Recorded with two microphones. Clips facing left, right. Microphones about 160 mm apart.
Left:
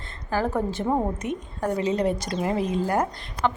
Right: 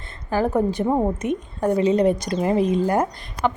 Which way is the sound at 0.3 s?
15° right (ahead or behind).